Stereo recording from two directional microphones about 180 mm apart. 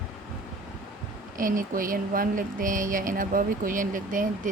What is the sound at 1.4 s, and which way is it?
A woman's voice, 50° right (ahead or behind).